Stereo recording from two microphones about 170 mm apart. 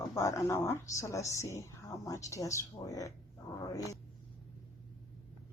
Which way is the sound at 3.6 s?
20° left (ahead or behind).